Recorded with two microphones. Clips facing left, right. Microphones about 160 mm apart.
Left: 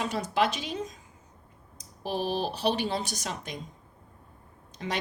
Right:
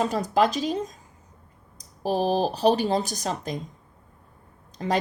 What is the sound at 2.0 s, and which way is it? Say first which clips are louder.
Speech: right 7 dB; 40° right (ahead or behind).